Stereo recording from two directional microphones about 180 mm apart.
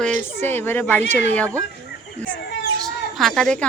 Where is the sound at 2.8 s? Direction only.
Centre (ahead or behind).